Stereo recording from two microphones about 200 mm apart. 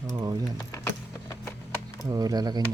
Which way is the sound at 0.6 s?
15° left (ahead or behind).